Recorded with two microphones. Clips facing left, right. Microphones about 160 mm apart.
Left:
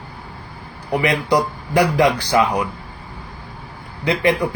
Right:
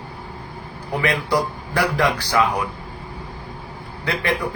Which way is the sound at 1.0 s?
20° left (ahead or behind).